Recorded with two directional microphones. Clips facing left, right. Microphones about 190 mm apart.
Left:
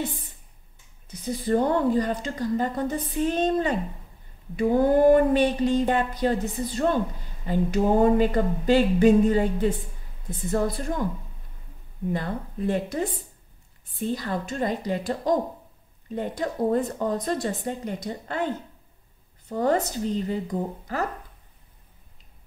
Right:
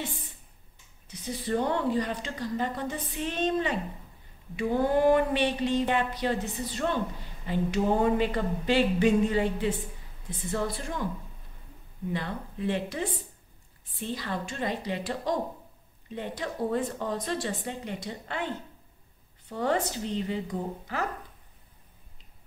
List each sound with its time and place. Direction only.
1.2 s a woman's voice: 45° left (ahead or behind)
12.1 s a woman's voice: 45° left (ahead or behind)
14.0 s a woman's voice: 45° left (ahead or behind)
19.5 s a woman's voice: 40° left (ahead or behind)